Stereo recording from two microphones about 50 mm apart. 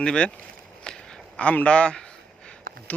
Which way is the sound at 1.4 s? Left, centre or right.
Left.